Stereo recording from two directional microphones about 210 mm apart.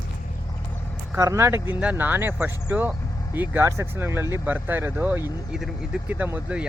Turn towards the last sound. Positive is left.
turn(degrees=-5)  # may be behind; listen again after turning